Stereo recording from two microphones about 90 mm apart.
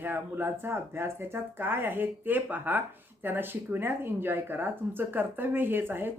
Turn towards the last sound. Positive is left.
turn(degrees=-25)  # may be behind; listen again after turning